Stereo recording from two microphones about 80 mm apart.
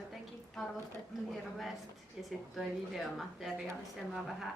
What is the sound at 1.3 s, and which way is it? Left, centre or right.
Speech, centre.